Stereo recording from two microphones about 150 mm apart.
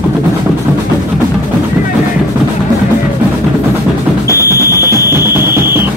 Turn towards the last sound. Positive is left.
turn(degrees=-15)  # may be behind; listen again after turning